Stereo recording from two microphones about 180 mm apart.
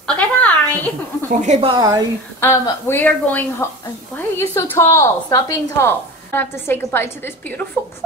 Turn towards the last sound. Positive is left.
turn(degrees=10)  # may be behind; listen again after turning